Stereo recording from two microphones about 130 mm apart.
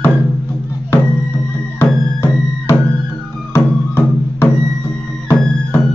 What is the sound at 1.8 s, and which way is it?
Music, 20° left (ahead or behind).